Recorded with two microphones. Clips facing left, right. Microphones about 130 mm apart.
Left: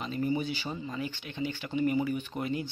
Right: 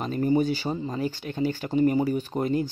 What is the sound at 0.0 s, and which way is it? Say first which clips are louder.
Speech: right 7 dB; 45° right (ahead or behind).